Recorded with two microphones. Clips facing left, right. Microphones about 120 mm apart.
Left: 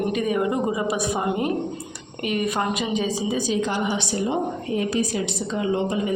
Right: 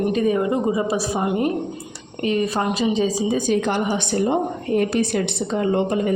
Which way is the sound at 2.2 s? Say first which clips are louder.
Right 3 dB; 30° right (ahead or behind).